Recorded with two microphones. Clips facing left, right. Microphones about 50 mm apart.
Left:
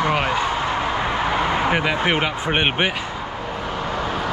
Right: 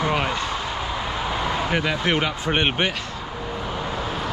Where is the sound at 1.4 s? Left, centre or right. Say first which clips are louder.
Left 4 dB; left.